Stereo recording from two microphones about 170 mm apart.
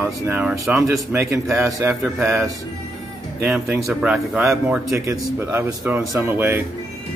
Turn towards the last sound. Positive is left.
turn(degrees=-10)  # may be behind; listen again after turning